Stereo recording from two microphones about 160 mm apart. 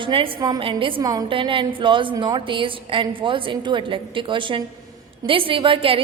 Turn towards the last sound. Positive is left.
turn(degrees=-35)  # may be behind; listen again after turning